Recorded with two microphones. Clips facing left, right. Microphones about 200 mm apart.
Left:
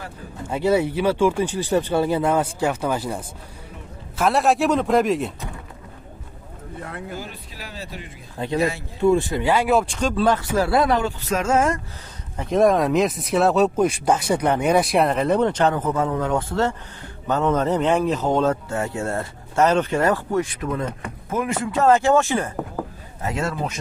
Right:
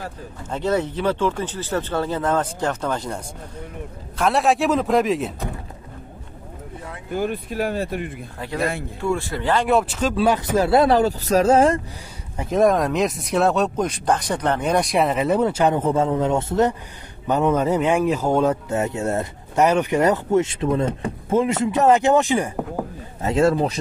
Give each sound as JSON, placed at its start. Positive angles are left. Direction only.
{"t": 0.5, "sound": "speech", "side_deg": 10}
{"t": 4.2, "sound": "speech", "side_deg": 0}
{"t": 7.2, "sound": "speech", "side_deg": -55}
{"t": 9.0, "sound": "speech", "side_deg": 20}
{"t": 12.4, "sound": "speech", "side_deg": 0}
{"t": 15.7, "sound": "a man's voice", "side_deg": -25}
{"t": 23.2, "sound": "speech", "side_deg": -30}